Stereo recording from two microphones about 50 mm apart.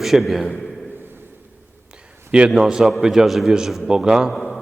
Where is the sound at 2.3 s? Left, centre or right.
Right.